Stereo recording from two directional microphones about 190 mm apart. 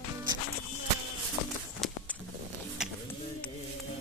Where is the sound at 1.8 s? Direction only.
Centre (ahead or behind).